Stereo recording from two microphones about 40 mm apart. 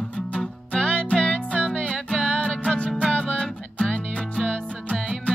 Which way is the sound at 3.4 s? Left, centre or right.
Centre.